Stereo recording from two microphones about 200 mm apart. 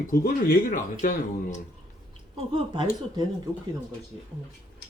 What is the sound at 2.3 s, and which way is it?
Speech, 25° right (ahead or behind).